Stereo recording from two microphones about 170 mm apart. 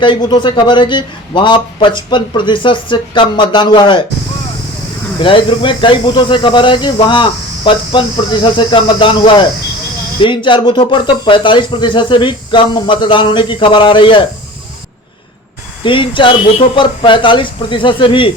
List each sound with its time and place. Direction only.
0.0 s speech: 30° left (ahead or behind)
5.2 s speech: 30° left (ahead or behind)
15.8 s speech: 30° left (ahead or behind)